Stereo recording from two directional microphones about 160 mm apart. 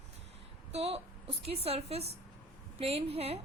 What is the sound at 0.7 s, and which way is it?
A woman's voice, 40° right (ahead or behind).